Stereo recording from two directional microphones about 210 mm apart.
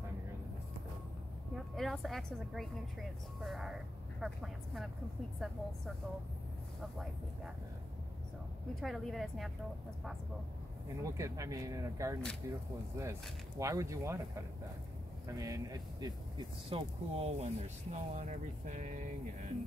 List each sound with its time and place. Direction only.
1.5 s a woman's voice: centre (ahead or behind)
8.8 s a woman's voice: centre (ahead or behind)
11.0 s speech: 15° right (ahead or behind); by 19.0 s 35° right (ahead or behind)